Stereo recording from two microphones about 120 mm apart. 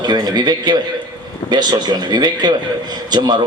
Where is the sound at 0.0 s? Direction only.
35° right (ahead or behind).